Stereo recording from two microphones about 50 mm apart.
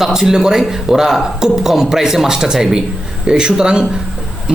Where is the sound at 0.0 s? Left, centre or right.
Centre.